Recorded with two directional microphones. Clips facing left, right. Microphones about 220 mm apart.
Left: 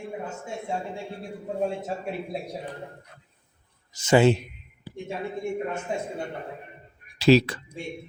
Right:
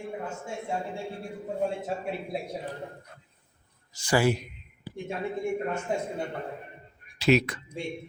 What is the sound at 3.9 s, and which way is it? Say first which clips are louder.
Speech: left 6 dB; 20° left (ahead or behind).